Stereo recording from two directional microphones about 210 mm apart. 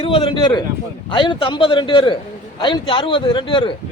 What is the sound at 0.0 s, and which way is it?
A man's voice, 25° left (ahead or behind).